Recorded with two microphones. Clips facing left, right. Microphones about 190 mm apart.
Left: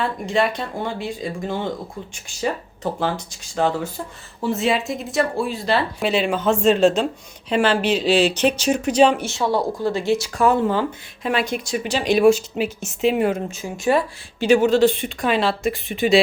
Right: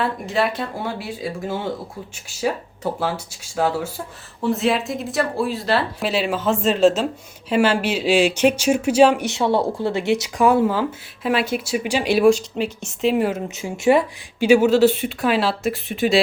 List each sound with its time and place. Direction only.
0.0 s speech: 5° right (ahead or behind)
13.5 s speech: 20° right (ahead or behind)
14.3 s speech: 10° right (ahead or behind)